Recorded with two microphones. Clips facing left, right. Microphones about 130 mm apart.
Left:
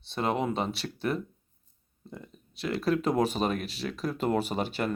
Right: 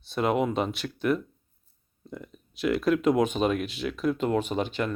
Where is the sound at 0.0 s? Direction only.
30° left (ahead or behind).